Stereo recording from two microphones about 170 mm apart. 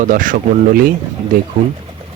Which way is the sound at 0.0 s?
50° right (ahead or behind).